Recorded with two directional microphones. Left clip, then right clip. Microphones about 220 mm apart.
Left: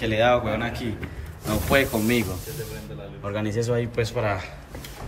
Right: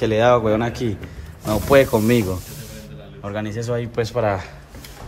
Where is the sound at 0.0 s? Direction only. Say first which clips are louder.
Right 5 dB; 20° right (ahead or behind).